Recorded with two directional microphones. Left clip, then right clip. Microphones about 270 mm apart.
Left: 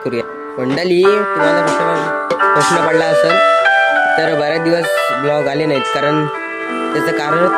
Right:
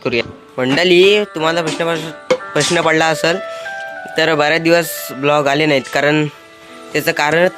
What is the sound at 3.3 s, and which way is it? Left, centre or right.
Music, left.